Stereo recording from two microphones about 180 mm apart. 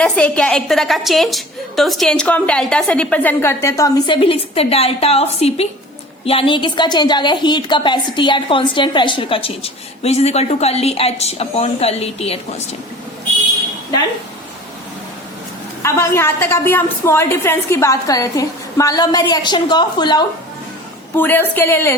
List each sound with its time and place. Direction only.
0.0 s a woman's voice: 5° left (ahead or behind); by 12.6 s 35° left (ahead or behind)
15.8 s a woman's voice: 15° left (ahead or behind)
21.2 s a woman's voice: 10° left (ahead or behind)